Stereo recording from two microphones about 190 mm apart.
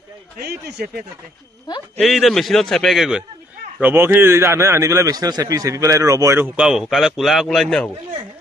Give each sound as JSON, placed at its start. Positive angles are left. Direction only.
{"t": 0.4, "sound": "speech", "side_deg": -55}
{"t": 2.0, "sound": "a man's voice", "side_deg": 0}